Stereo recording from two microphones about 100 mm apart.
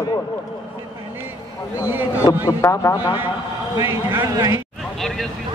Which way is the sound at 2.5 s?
30° left (ahead or behind).